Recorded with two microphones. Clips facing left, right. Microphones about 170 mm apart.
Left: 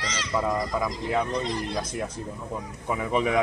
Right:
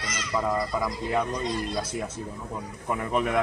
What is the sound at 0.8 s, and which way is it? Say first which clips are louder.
Speech: left 1 dB; 5° right (ahead or behind).